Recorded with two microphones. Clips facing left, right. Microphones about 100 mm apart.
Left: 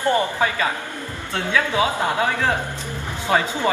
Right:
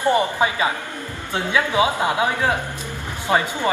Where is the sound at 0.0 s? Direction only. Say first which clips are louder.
Right 1 dB; 15° right (ahead or behind).